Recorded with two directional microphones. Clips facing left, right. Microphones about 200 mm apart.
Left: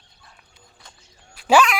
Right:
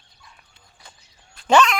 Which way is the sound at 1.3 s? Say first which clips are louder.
Even; 5° left (ahead or behind).